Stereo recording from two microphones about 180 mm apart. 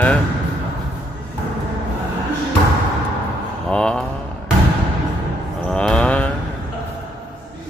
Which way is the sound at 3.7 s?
5° left (ahead or behind).